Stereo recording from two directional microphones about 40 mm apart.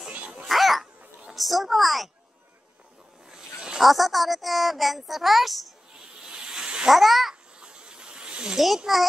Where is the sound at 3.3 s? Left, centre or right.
Centre.